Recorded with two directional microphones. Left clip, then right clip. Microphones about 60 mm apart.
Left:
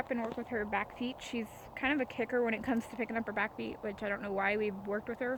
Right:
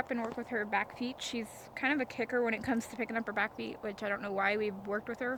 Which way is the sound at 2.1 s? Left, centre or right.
Left.